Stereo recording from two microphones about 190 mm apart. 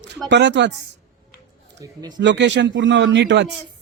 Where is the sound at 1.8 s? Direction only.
20° right (ahead or behind).